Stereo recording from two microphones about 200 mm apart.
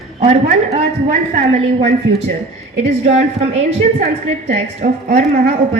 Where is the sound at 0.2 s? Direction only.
30° right (ahead or behind).